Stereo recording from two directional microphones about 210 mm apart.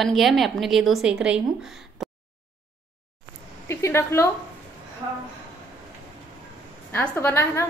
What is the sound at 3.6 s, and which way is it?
Speech, 10° left (ahead or behind).